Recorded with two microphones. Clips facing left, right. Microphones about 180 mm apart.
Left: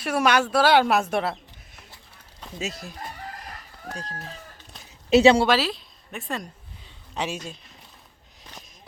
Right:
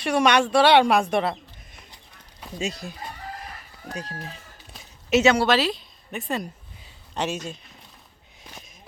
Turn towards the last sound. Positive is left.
turn(degrees=0)  # may be behind; listen again after turning